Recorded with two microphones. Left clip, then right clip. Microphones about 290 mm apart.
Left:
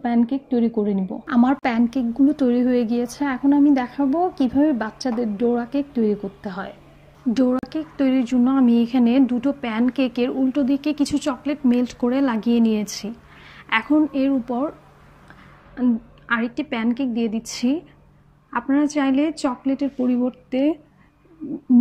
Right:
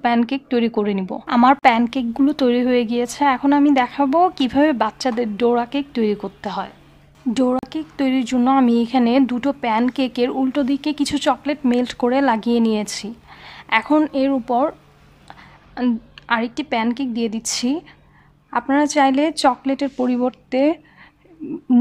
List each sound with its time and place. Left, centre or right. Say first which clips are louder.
0.0 s speech: right 4 dB; right
1.3 s a woman's voice: right 7 dB; right